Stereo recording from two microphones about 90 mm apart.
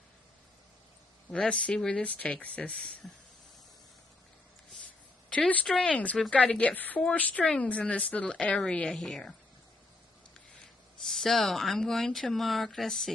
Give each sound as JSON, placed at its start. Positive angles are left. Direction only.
{"t": 1.3, "sound": "speech", "side_deg": 15}
{"t": 4.8, "sound": "a sound", "side_deg": 15}
{"t": 5.9, "sound": "speech", "side_deg": 15}
{"t": 10.6, "sound": "speech", "side_deg": 5}